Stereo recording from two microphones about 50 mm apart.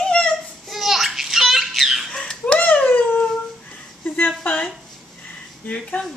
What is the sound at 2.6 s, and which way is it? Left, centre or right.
Dog, left.